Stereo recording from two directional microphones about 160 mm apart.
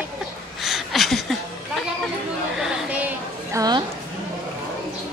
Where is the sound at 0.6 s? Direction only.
Centre (ahead or behind).